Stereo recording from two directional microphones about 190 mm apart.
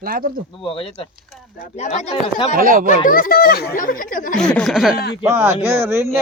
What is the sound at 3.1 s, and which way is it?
Speech, 50° left (ahead or behind).